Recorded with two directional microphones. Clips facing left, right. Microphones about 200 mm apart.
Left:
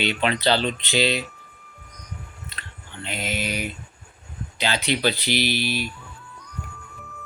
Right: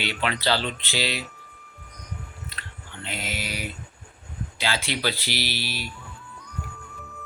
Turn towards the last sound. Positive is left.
turn(degrees=20)  # may be behind; listen again after turning